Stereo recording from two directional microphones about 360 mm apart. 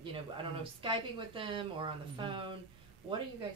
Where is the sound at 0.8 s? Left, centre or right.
Centre.